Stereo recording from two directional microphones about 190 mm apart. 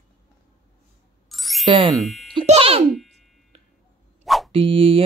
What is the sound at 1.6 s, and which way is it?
Speech, 20° right (ahead or behind).